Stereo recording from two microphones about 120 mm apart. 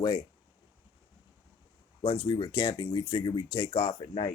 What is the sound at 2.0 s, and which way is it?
Speech, 50° left (ahead or behind).